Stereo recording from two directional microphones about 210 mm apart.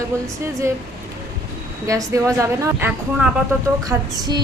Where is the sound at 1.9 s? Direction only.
15° right (ahead or behind).